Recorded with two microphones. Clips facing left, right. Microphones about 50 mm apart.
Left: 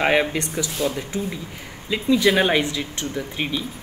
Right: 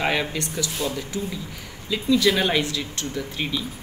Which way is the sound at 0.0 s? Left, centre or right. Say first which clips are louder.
Left 5 dB; left.